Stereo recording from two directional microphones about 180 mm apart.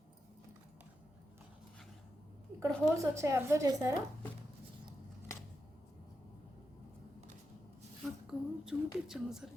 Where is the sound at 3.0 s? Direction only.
15° right (ahead or behind).